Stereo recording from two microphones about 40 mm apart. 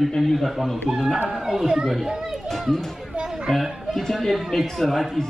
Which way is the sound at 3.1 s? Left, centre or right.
Centre.